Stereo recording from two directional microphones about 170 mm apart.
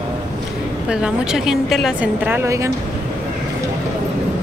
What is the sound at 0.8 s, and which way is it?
A woman's voice, 5° right (ahead or behind).